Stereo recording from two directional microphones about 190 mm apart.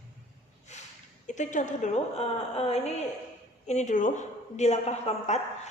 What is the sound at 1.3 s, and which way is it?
A woman's voice, 40° left (ahead or behind).